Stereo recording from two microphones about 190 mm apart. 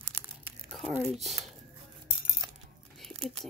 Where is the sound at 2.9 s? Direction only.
Centre (ahead or behind).